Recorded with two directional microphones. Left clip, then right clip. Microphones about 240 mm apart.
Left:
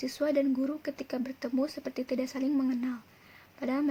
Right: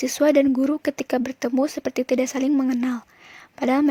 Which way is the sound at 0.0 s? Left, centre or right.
Right.